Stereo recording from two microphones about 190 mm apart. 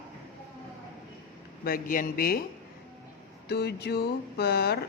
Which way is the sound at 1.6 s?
50° left (ahead or behind).